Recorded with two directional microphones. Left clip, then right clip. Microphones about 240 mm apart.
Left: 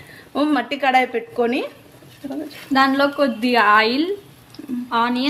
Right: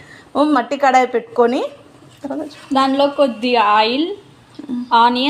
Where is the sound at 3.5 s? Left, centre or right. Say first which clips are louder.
Even; left.